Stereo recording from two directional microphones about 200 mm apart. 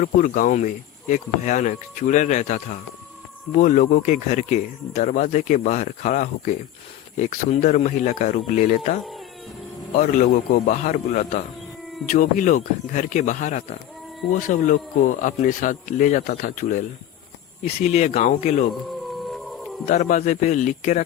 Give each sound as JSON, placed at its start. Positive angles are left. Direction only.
{"t": 0.0, "sound": "speech", "side_deg": 40}
{"t": 10.0, "sound": "speech", "side_deg": 40}
{"t": 19.3, "sound": "a sound", "side_deg": 0}
{"t": 19.8, "sound": "speech", "side_deg": 40}